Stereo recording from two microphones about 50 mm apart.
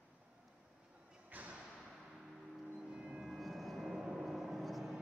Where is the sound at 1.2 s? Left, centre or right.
Right.